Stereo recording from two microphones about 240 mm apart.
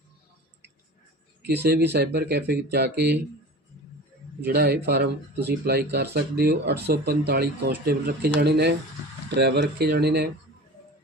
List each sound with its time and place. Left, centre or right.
1.5 s speech: right
4.4 s speech: right